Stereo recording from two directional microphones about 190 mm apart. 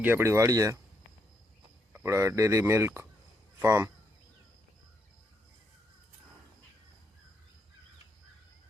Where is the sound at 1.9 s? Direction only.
15° right (ahead or behind).